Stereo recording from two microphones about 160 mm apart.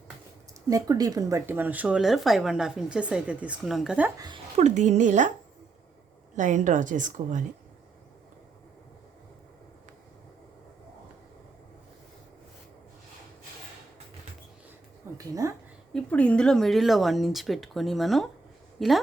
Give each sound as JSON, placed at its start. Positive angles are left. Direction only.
{"t": 0.7, "sound": "speech", "side_deg": -20}
{"t": 4.5, "sound": "a woman's voice", "side_deg": -45}
{"t": 6.3, "sound": "a woman's voice", "side_deg": -50}
{"t": 15.1, "sound": "a sound", "side_deg": -20}
{"t": 15.9, "sound": "speech", "side_deg": 5}